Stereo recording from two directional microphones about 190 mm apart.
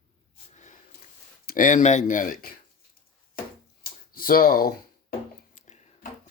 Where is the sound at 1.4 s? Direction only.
45° left (ahead or behind).